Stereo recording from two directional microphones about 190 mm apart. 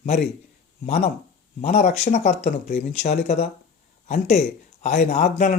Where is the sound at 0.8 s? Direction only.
35° left (ahead or behind).